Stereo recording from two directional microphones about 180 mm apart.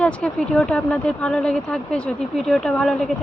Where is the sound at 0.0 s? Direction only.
5° left (ahead or behind).